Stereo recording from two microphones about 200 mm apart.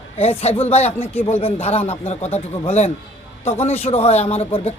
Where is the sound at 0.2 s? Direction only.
30° left (ahead or behind).